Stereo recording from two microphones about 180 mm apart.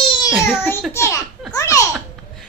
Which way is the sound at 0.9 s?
15° left (ahead or behind).